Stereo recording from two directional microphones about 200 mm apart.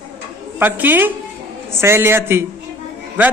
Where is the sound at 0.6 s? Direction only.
10° right (ahead or behind).